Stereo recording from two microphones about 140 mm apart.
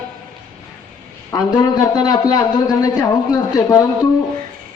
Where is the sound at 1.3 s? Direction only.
25° left (ahead or behind).